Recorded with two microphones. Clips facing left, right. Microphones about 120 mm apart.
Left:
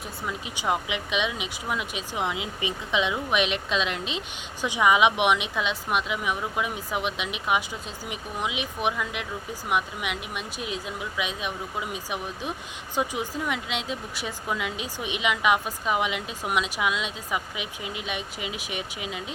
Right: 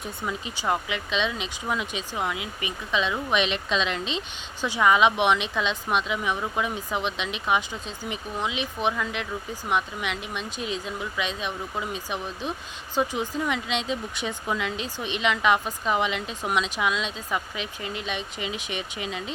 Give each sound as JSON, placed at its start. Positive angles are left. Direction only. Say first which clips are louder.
{"t": 0.2, "sound": "speech", "louder": "right 1 dB", "side_deg": 5}
{"t": 0.5, "sound": "speech", "louder": "left 1 dB", "side_deg": 15}
{"t": 2.1, "sound": "speech", "louder": "left 1 dB", "side_deg": 20}
{"t": 3.2, "sound": "speech", "louder": "even", "side_deg": 5}